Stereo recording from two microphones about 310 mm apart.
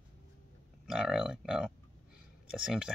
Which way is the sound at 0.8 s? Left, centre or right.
Centre.